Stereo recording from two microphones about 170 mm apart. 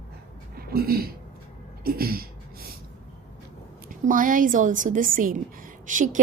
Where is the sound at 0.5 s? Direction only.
60° right (ahead or behind).